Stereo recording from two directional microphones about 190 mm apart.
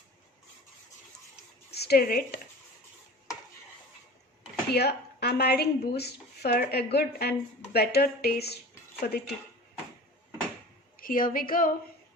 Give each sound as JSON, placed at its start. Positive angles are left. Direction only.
{"t": 1.7, "sound": "a woman's voice", "side_deg": 60}
{"t": 4.7, "sound": "a woman's voice", "side_deg": 55}
{"t": 11.0, "sound": "a woman's voice", "side_deg": 45}